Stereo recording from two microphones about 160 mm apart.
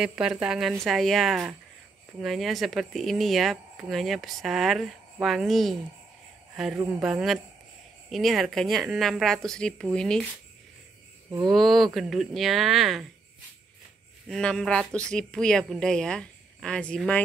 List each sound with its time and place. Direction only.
0.0 s speech: 5° right (ahead or behind)
11.2 s a sound: 15° right (ahead or behind)
11.5 s speech: centre (ahead or behind)
14.3 s speech: 5° left (ahead or behind)